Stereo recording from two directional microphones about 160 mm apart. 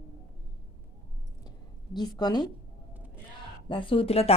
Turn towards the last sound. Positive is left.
turn(degrees=40)  # may be behind; listen again after turning